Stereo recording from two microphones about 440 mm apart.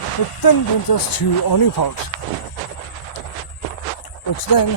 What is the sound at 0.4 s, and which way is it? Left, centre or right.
Speech, left.